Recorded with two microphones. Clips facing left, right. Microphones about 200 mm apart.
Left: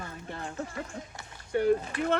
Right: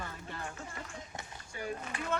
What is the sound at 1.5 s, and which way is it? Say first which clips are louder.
Speech: left 15 dB; 65° left (ahead or behind).